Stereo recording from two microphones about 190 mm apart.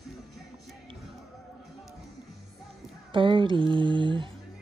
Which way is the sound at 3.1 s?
25° right (ahead or behind).